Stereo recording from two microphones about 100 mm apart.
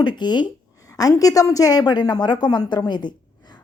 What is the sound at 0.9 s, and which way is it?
A woman's voice, 35° left (ahead or behind).